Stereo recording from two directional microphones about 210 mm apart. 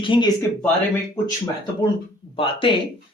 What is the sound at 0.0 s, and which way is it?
Speech, 25° left (ahead or behind).